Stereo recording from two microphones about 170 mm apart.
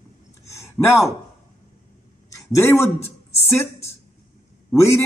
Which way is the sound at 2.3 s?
15° left (ahead or behind).